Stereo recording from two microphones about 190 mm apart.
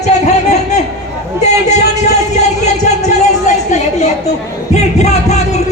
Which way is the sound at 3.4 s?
35° left (ahead or behind).